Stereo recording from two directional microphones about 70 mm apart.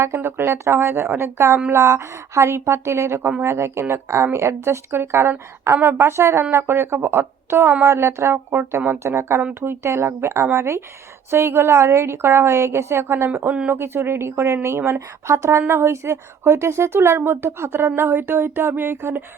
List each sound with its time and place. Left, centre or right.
0.0 s a woman's voice: right